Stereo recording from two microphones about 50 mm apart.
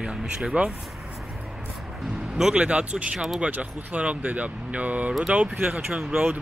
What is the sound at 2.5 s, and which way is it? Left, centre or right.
Speech, right.